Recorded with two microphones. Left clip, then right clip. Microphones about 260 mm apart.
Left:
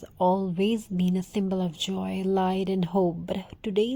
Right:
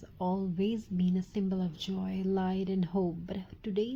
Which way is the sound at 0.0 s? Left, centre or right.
Left.